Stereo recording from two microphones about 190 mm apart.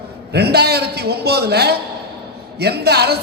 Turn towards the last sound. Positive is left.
turn(degrees=-60)  # may be behind; listen again after turning